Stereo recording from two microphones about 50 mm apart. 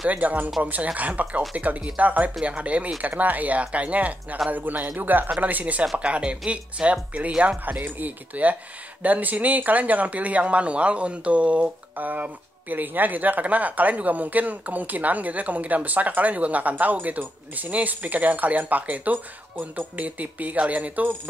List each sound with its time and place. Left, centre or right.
0.1 s speech: right